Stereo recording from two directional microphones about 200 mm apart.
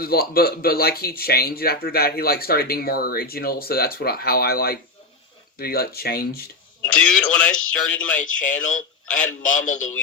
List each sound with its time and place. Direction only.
0.0 s speech: 50° left (ahead or behind)
7.0 s speech: 5° left (ahead or behind)
8.2 s a man's voice: 40° left (ahead or behind)